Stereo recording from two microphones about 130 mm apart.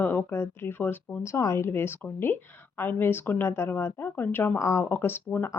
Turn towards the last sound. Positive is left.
turn(degrees=15)  # may be behind; listen again after turning